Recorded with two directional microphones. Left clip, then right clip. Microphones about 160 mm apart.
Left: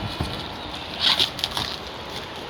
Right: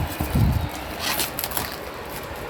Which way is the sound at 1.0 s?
10° right (ahead or behind).